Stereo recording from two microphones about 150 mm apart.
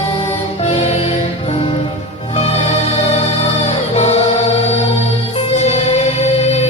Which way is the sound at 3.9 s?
50° left (ahead or behind).